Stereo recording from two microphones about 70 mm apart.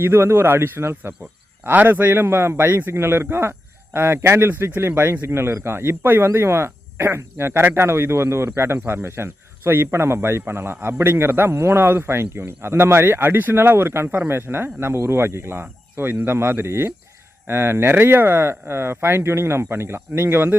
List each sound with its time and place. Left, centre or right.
0.0 s a man's voice: right